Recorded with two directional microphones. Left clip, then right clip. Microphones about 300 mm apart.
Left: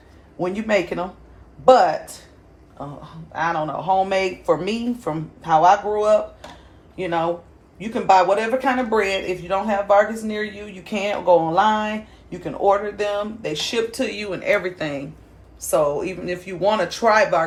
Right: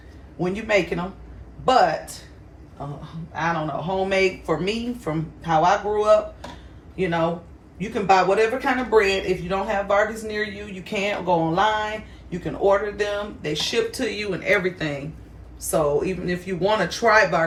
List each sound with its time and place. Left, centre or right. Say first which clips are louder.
0.3 s speech: left 1 dB; left
3.3 s a man's voice: left 2 dB; centre